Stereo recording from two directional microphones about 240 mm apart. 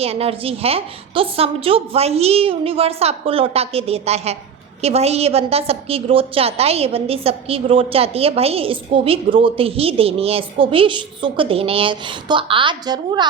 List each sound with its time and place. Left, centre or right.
0.0 s a woman's voice: right